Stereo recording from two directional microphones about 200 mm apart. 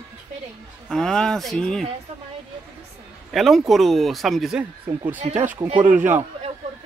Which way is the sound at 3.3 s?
Centre (ahead or behind).